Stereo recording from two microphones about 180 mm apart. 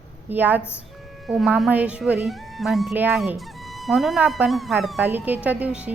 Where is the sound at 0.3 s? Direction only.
10° right (ahead or behind).